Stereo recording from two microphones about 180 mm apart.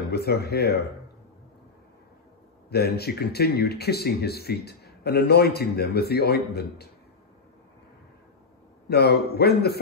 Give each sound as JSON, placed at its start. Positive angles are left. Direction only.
{"t": 0.1, "sound": "speech", "side_deg": 60}
{"t": 2.7, "sound": "speech", "side_deg": 60}
{"t": 8.8, "sound": "speech", "side_deg": 65}